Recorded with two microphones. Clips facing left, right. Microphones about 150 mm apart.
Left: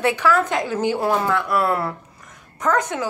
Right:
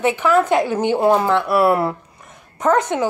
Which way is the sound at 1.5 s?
10° right (ahead or behind).